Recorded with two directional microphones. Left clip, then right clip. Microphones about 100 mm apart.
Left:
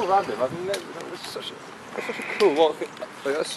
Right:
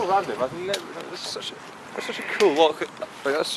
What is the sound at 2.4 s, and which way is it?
Speech, 20° right (ahead or behind).